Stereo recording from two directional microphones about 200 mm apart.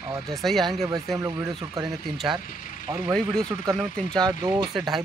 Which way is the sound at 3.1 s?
5° left (ahead or behind).